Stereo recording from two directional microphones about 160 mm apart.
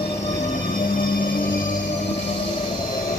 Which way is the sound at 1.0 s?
60° left (ahead or behind).